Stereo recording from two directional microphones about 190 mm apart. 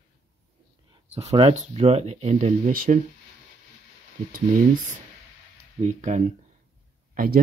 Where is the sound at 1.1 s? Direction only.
30° right (ahead or behind).